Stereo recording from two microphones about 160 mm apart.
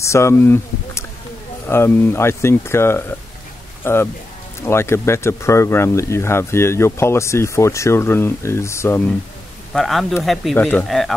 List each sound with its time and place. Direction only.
0.0 s speech: 15° left (ahead or behind)
9.7 s speech: centre (ahead or behind)